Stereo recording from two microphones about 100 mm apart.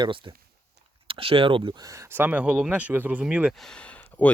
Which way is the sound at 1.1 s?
65° right (ahead or behind).